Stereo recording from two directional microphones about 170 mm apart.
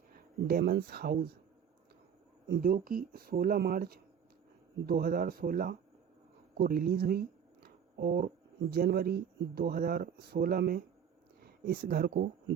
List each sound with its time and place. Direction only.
0.1 s speech: 60° right (ahead or behind)
2.5 s speech: 55° right (ahead or behind)
6.6 s a sound: 60° right (ahead or behind)
8.7 s speech: 60° right (ahead or behind)